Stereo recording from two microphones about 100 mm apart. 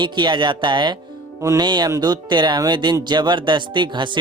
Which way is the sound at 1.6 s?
45° right (ahead or behind).